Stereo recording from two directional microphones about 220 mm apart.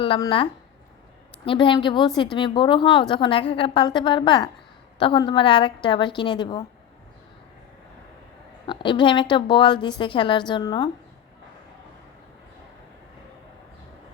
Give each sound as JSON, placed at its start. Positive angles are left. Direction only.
{"t": 0.0, "sound": "speech", "side_deg": 25}
{"t": 1.5, "sound": "a woman's voice", "side_deg": 20}
{"t": 8.6, "sound": "a woman's voice", "side_deg": 20}